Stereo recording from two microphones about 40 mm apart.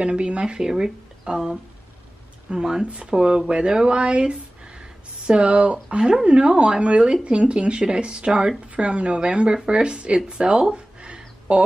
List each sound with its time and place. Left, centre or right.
0.0 s speech: right
2.8 s speech: right
10.7 s a sound: right